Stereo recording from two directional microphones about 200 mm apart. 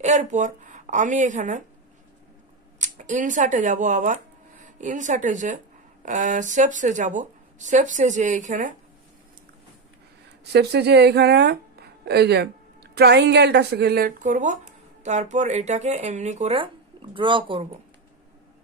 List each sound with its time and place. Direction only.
0.0 s a woman's voice: 35° right (ahead or behind)
2.8 s speech: 40° right (ahead or behind)
10.5 s speech: 55° right (ahead or behind); by 17.6 s 25° right (ahead or behind)